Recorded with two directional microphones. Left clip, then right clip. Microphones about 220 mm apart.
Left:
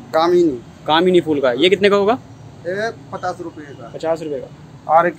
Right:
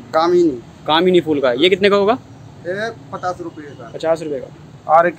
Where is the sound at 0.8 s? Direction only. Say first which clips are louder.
Even; centre (ahead or behind).